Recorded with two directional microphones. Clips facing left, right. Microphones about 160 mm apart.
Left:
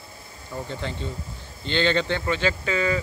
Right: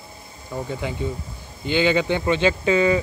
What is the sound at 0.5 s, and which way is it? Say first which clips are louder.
Speech: right 4 dB; 10° right (ahead or behind).